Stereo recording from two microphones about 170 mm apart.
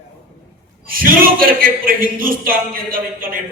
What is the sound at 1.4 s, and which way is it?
A man's voice, 55° right (ahead or behind).